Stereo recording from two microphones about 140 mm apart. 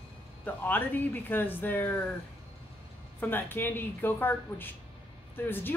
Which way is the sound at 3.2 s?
15° left (ahead or behind).